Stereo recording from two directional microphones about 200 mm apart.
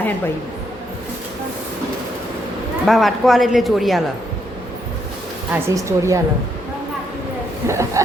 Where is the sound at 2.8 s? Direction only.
Centre (ahead or behind).